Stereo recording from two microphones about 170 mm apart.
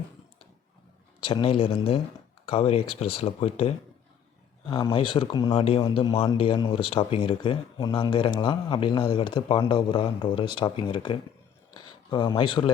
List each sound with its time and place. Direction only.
1.2 s speech: 30° left (ahead or behind)